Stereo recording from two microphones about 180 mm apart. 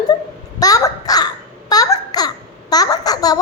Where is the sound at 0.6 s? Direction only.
20° left (ahead or behind).